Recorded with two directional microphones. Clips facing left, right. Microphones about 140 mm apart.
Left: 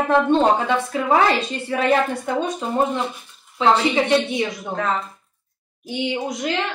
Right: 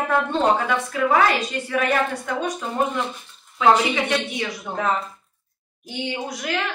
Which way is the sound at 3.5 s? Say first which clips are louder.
Left 1 dB; 25° left (ahead or behind).